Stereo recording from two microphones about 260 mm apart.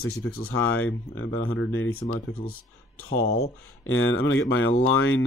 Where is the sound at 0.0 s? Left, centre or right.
Left.